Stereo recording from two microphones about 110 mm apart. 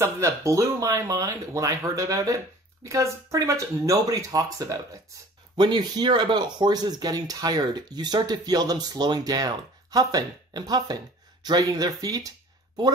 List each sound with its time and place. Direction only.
0.0 s speech: 30° right (ahead or behind)
5.6 s speech: 40° right (ahead or behind)